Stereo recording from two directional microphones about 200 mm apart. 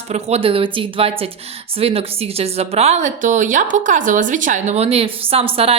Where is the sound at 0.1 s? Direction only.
30° right (ahead or behind).